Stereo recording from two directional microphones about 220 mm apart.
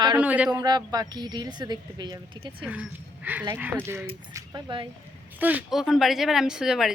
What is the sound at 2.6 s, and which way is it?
Speech, 5° right (ahead or behind).